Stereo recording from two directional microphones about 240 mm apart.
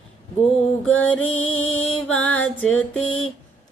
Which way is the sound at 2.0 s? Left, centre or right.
Left.